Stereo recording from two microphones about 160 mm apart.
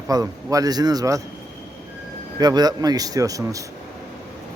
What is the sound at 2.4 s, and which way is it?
Speech, 25° right (ahead or behind).